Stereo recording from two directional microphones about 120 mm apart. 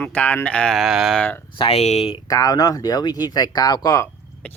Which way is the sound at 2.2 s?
30° left (ahead or behind).